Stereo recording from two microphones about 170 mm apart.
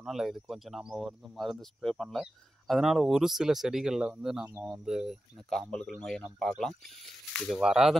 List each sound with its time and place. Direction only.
0.0 s speech: centre (ahead or behind)